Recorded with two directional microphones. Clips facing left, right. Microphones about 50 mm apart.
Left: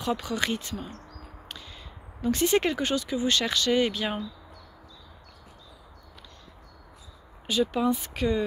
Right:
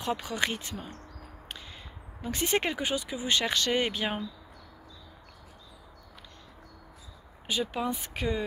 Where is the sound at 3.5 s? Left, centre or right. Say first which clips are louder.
Left 3 dB; right.